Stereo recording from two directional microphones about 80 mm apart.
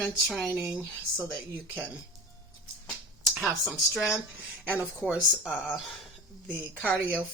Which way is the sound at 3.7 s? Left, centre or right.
Centre.